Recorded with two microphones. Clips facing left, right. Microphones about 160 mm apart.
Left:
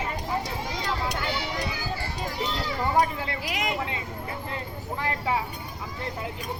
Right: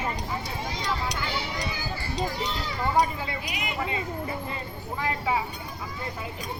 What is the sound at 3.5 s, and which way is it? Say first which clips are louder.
Speech: left 1 dB; 90° left.